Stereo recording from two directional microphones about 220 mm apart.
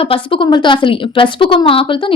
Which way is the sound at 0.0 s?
25° left (ahead or behind).